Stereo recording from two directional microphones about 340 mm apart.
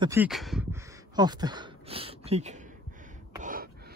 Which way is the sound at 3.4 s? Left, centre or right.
Right.